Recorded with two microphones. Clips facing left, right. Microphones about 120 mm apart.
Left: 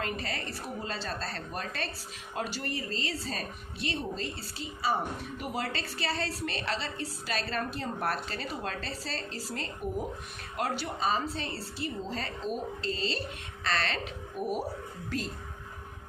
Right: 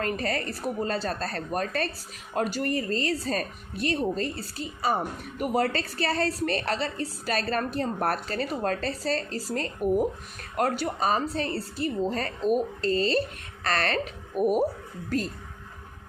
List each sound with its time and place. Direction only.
0.0 s a woman's voice: 50° right (ahead or behind)